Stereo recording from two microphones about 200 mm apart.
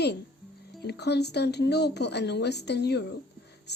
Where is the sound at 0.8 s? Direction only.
55° left (ahead or behind).